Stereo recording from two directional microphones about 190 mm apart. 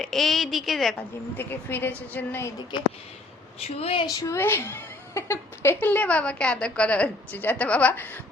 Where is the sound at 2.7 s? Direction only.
25° left (ahead or behind).